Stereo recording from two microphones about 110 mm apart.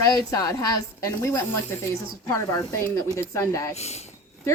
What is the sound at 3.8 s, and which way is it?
Speech, 80° left.